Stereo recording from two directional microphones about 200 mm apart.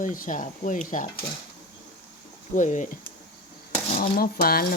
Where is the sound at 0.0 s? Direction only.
40° left (ahead or behind).